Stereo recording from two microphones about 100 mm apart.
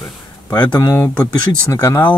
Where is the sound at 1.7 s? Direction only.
30° left (ahead or behind).